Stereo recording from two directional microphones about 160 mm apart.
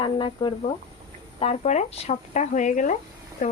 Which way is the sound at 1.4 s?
45° left (ahead or behind).